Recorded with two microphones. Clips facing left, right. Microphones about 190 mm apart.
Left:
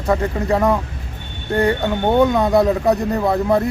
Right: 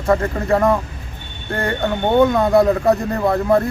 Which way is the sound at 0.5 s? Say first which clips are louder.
Right 2 dB; centre (ahead or behind).